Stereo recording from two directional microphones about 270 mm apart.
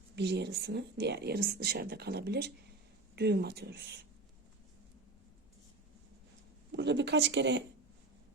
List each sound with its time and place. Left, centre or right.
0.2 s speech: right
6.7 s speech: right